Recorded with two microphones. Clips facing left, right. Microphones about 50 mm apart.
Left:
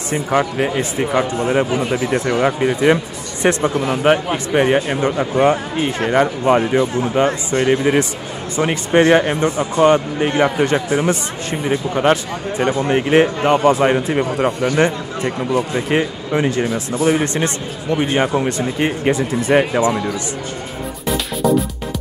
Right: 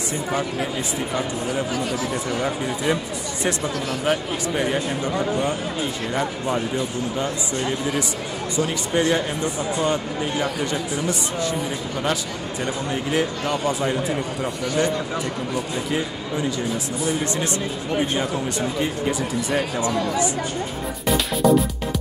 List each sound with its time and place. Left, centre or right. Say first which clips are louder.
0.1 s speech: left 9 dB; left
1.7 s speech: left 6 dB; left
2.0 s speech: left 7 dB; left
2.3 s speech: left 8 dB; left
3.7 s speech: left 7 dB; left
4.0 s speech: left 7 dB; left
14.6 s speech: left 6 dB; left
15.9 s speech: left 9 dB; left